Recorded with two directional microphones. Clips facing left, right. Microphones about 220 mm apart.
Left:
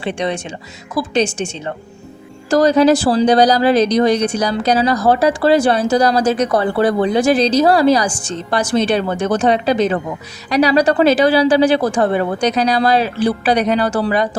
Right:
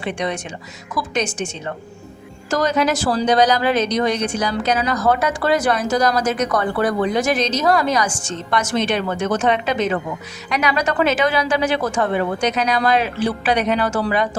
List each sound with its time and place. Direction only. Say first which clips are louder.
0.0 s a woman's voice: left 3 dB; 30° left (ahead or behind)